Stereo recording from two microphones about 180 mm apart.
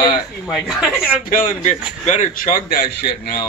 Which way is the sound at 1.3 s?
45° left (ahead or behind).